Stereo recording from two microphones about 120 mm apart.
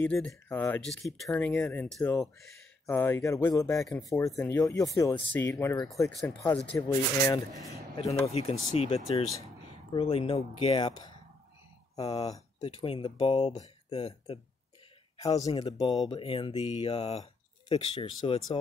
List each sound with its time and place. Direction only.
0.0 s speech: 5° left (ahead or behind)
1.3 s speech: 10° left (ahead or behind)
2.9 s speech: 20° left (ahead or behind)
5.1 s speech: 15° left (ahead or behind)
5.5 s speech: 30° left (ahead or behind)
7.7 s speech: 60° left (ahead or behind)
10.9 s a sound: 35° left (ahead or behind)
11.9 s speech: 35° left (ahead or behind)
12.6 s speech: 50° left (ahead or behind)
15.3 s speech: 35° left (ahead or behind); by 18.6 s 50° left (ahead or behind)